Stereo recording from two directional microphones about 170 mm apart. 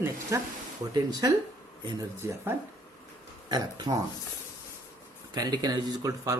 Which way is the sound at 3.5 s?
25° right (ahead or behind).